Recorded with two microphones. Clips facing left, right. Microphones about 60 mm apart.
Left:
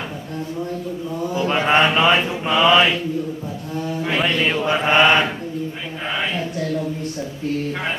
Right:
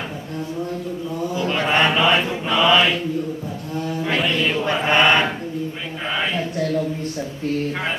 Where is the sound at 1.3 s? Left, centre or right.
Left.